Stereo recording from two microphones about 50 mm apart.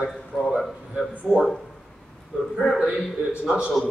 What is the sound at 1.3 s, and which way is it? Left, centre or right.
Speech, centre.